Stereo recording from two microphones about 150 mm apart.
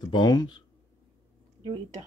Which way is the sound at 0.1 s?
30° left (ahead or behind).